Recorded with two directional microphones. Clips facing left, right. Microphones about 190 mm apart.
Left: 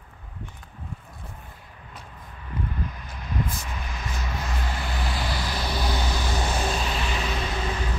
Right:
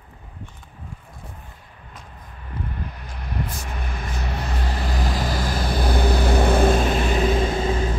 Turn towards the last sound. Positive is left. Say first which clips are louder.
# right 7 dB
turn(degrees=-25)  # may be behind; listen again after turning